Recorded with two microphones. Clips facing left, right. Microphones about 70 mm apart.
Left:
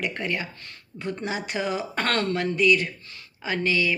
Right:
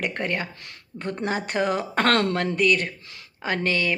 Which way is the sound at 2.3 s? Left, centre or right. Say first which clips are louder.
Even; right.